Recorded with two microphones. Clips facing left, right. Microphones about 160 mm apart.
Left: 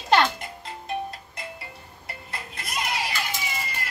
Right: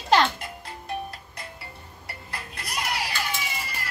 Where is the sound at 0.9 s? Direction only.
20° left (ahead or behind).